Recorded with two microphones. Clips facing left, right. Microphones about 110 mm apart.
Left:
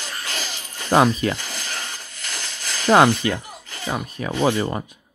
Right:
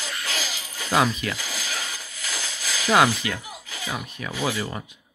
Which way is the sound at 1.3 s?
5° right (ahead or behind).